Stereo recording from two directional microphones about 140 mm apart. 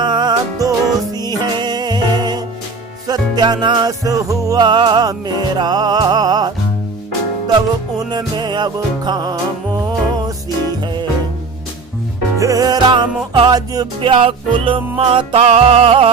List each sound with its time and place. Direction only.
0.0 s music: 30° right (ahead or behind)
7.9 s music: 30° right (ahead or behind)
12.4 s music: 25° right (ahead or behind); by 16.1 s 45° right (ahead or behind)